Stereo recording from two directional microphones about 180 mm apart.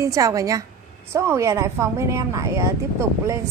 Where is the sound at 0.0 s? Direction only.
20° right (ahead or behind).